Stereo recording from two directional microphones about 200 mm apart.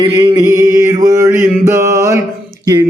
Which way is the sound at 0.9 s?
15° right (ahead or behind).